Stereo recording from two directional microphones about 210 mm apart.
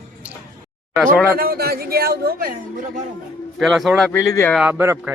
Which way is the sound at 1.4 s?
45° right (ahead or behind).